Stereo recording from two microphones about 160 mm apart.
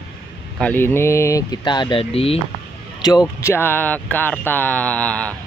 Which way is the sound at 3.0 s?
25° left (ahead or behind).